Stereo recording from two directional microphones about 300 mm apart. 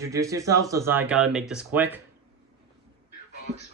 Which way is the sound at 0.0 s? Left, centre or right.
Centre.